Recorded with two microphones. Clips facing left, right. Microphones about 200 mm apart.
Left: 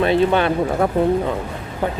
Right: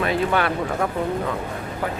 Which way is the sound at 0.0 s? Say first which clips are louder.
Left 5 dB; 25° left (ahead or behind).